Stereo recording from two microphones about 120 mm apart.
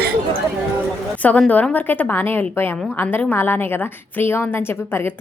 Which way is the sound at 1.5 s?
15° left (ahead or behind).